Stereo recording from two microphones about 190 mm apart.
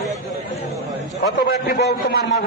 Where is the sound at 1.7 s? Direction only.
55° left (ahead or behind).